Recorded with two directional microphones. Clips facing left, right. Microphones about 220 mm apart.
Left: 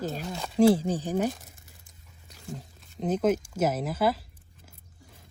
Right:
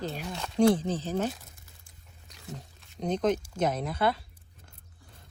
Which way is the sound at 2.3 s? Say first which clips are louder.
Left 3 dB; centre (ahead or behind).